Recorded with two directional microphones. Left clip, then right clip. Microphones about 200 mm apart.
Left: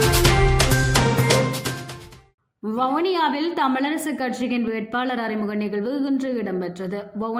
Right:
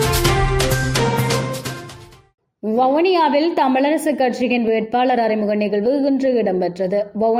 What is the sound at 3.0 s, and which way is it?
A woman's voice, 5° right (ahead or behind).